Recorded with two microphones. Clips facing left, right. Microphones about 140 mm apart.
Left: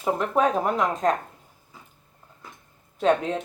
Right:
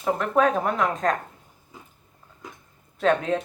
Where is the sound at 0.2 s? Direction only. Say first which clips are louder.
Right 2 dB; 30° left (ahead or behind).